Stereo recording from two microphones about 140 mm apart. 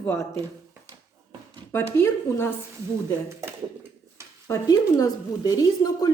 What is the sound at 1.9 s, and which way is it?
Speech, 15° left (ahead or behind).